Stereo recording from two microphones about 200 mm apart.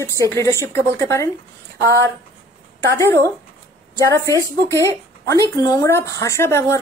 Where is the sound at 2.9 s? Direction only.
15° left (ahead or behind).